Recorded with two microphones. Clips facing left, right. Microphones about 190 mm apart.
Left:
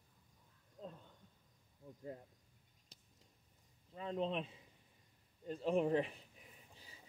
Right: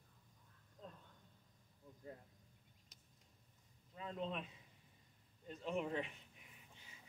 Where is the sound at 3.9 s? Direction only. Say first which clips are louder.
Left 5 dB; 30° left (ahead or behind).